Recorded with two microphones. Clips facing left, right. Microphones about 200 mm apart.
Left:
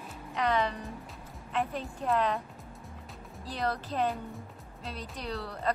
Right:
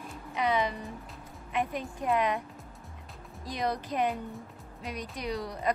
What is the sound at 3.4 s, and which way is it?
Speech, 15° right (ahead or behind).